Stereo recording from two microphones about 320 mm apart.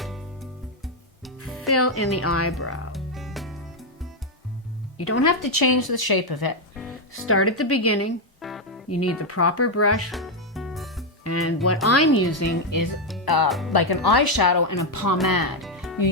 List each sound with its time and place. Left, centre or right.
1.6 s speech: left
2.9 s music: centre
4.9 s speech: left
5.2 s speech: left
7.3 s speech: left
8.4 s music: centre
8.9 s speech: left
10.1 s music: centre
11.2 s speech: left
13.2 s speech: left
13.5 s speech: centre
14.2 s speech: left
15.3 s speech: left
15.6 s music: centre